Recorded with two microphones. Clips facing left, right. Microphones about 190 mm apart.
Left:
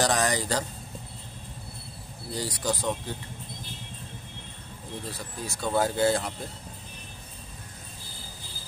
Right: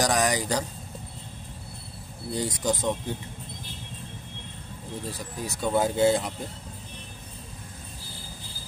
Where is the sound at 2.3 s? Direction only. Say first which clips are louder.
Right 3 dB; 20° right (ahead or behind).